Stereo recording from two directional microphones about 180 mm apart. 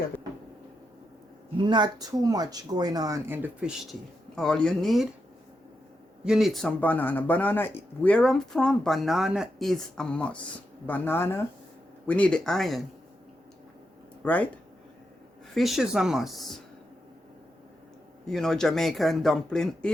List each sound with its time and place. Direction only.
1.5 s speech: 25° right (ahead or behind); by 3.8 s 10° right (ahead or behind)
4.4 s speech: 5° left (ahead or behind)
6.2 s speech: centre (ahead or behind)
14.3 s speech: 10° left (ahead or behind)
15.5 s speech: centre (ahead or behind)
18.3 s speech: centre (ahead or behind)